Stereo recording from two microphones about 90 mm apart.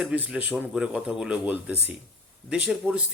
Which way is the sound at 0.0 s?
10° right (ahead or behind).